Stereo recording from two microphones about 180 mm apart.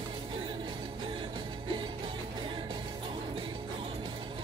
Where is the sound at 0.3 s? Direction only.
25° right (ahead or behind).